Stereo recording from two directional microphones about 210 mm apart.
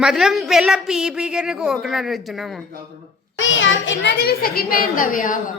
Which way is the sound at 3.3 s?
65° left (ahead or behind).